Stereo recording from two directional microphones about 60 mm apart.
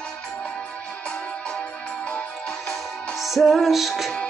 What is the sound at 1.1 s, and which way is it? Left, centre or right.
Music, centre.